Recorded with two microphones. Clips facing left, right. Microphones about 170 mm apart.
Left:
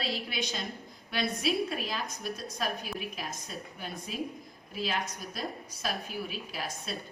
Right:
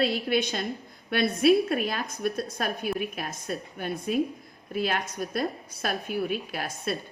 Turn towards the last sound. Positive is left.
turn(degrees=-55)  # may be behind; listen again after turning